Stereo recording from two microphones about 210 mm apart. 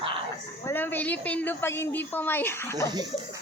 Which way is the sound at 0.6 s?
10° left (ahead or behind).